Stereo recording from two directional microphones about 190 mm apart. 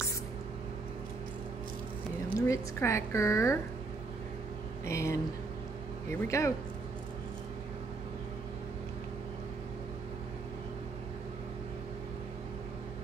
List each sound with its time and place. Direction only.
2.2 s speech: 15° left (ahead or behind)
4.8 s speech: 15° left (ahead or behind)